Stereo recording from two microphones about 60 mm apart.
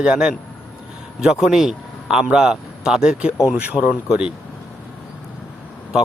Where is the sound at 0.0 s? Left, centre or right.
Centre.